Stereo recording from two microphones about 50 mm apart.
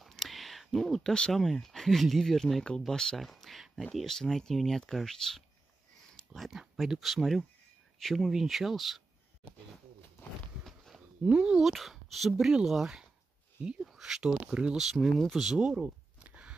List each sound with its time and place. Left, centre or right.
0.0 s whispering: centre
1.3 s speech: centre
3.2 s speech: centre
10.9 s a sound: centre
11.2 s speech: centre
11.6 s speech: centre
12.3 s speech: centre
13.6 s speech: centre
14.8 s speech: centre
16.2 s a sound: right